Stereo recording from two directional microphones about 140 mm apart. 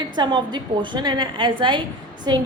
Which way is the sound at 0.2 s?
30° right (ahead or behind).